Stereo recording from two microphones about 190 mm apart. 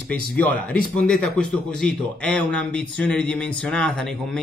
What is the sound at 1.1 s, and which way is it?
A man's voice, 5° left (ahead or behind).